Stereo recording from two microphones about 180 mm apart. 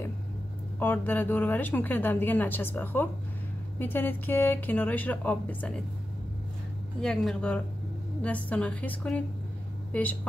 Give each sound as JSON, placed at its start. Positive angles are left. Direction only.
{"t": 0.7, "sound": "a woman's voice", "side_deg": 10}
{"t": 7.0, "sound": "a woman's voice", "side_deg": 5}